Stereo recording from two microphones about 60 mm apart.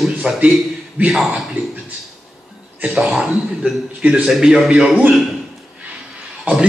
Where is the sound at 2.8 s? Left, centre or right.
Centre.